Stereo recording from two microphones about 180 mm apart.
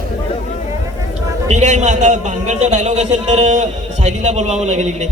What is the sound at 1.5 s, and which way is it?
A man's voice, 40° right (ahead or behind).